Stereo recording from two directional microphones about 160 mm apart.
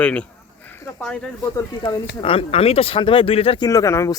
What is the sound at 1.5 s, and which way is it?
Speech, 25° left (ahead or behind).